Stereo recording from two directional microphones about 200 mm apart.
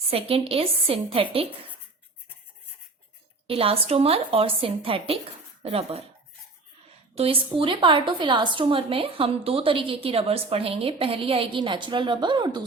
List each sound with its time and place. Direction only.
0.1 s a woman's voice: 30° right (ahead or behind)
3.4 s a woman's voice: 30° right (ahead or behind)
7.2 s a woman's voice: 25° right (ahead or behind)